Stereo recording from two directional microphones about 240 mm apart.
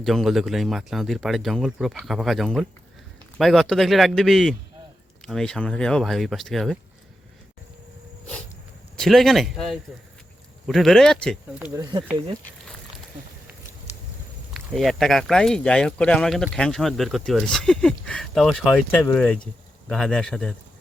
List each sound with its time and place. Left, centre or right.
0.0 s speech: centre
9.0 s speech: centre
11.6 s speech: centre
14.5 s speech: centre